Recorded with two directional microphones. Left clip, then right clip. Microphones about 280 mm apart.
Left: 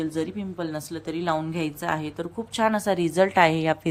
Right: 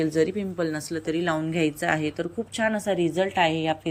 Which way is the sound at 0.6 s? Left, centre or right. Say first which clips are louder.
Right 2 dB; centre.